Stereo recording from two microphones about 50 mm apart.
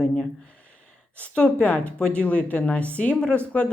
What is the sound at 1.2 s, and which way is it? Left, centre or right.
Speech, left.